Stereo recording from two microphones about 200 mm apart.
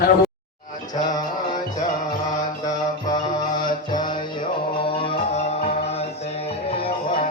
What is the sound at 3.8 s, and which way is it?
Music, 20° left (ahead or behind).